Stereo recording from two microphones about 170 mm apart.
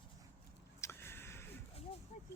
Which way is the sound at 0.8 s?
15° left (ahead or behind).